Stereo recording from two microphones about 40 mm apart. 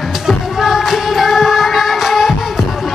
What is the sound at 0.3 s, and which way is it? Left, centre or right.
Music, centre.